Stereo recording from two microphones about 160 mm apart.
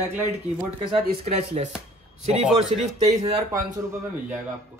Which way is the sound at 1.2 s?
40° right (ahead or behind).